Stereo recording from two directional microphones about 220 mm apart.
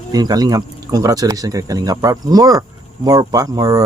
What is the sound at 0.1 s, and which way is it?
Speech, 15° right (ahead or behind).